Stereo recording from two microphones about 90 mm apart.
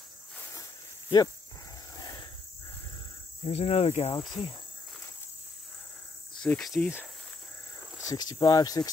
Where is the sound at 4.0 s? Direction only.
90° left.